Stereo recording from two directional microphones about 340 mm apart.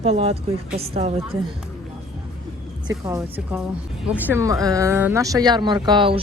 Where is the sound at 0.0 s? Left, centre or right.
Centre.